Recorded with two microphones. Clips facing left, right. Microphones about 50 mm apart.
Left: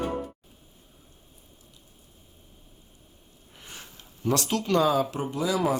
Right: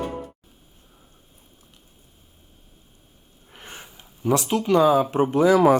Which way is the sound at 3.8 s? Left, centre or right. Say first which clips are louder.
Right 3 dB; centre.